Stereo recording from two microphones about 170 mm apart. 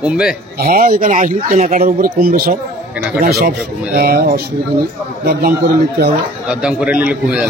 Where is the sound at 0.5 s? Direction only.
60° right (ahead or behind).